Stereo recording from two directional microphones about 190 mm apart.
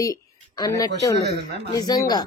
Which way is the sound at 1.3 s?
55° right (ahead or behind).